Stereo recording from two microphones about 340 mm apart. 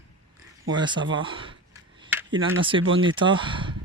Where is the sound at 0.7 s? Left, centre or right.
Centre.